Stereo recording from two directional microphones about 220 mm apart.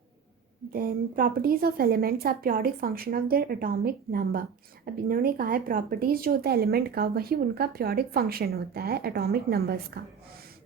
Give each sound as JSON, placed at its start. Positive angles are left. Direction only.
{"t": 0.7, "sound": "speech", "side_deg": -40}